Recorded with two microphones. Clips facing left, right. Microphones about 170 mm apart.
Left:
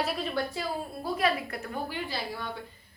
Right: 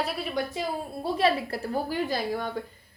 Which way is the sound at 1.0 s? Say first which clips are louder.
Right 4 dB; 30° right (ahead or behind).